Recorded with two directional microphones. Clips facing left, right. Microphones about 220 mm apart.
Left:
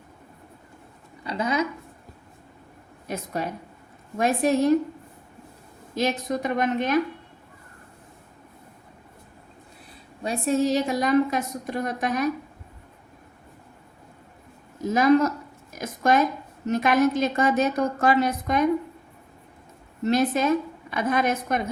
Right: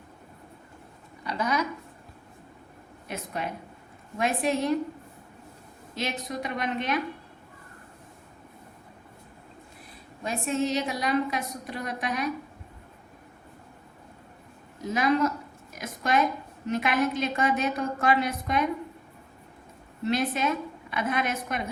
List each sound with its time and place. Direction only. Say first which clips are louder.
1.2 s a sound: left 3 dB; 25° left (ahead or behind)
3.1 s a woman's voice: left 4 dB; 40° left (ahead or behind)
5.9 s a woman's voice: left 7 dB; 45° left (ahead or behind)
10.2 s a woman's voice: left 5 dB; 35° left (ahead or behind)
14.8 s a woman's voice: left 6 dB; 45° left (ahead or behind)
20.1 s a woman's voice: left 5 dB; 40° left (ahead or behind)